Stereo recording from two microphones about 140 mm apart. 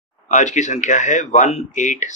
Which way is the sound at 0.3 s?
60° left (ahead or behind).